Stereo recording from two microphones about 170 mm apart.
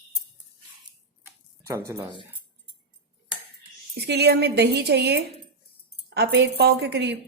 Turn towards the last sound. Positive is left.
turn(degrees=-80)